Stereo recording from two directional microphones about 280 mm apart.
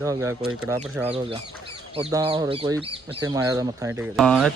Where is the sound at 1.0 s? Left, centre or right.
Centre.